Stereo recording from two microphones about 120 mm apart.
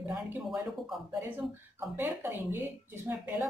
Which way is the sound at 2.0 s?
20° right (ahead or behind).